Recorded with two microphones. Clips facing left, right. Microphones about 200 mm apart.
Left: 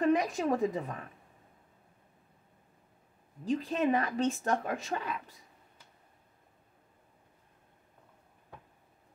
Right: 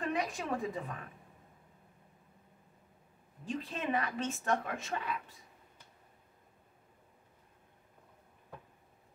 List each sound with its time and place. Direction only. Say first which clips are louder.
0.0 s a woman's voice: left 8 dB; 40° left (ahead or behind)
3.4 s a woman's voice: left 8 dB; 40° left (ahead or behind)